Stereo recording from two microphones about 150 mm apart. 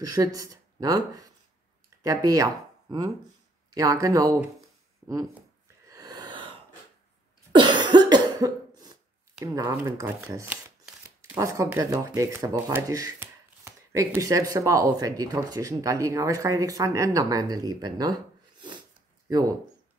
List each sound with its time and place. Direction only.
0.0 s speech: 25° right (ahead or behind)
5.9 s a sound: 25° right (ahead or behind)
7.5 s cough: 30° right (ahead or behind)
9.4 s speech: 20° right (ahead or behind)
19.2 s speech: 25° right (ahead or behind)